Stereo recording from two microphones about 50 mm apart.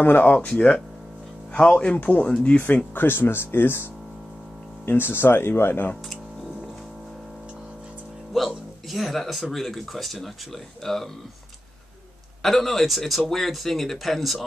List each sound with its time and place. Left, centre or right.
0.0 s speech: left
1.7 s speech: centre
2.0 s speech: left
2.2 s speech: centre
2.6 s speech: left
4.8 s speech: left
8.3 s speech: centre
12.4 s speech: centre